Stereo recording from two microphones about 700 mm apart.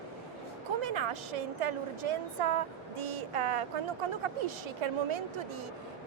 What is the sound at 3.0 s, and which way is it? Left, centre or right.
A woman's voice, right.